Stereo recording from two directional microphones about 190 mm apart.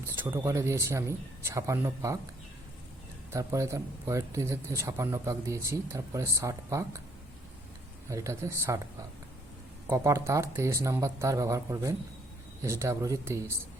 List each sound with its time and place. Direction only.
0.2 s speech: 15° right (ahead or behind)
3.3 s speech: 15° right (ahead or behind)
8.1 s speech: 15° right (ahead or behind)